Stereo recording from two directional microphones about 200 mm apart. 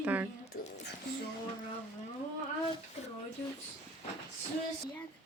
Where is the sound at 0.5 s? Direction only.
45° left (ahead or behind).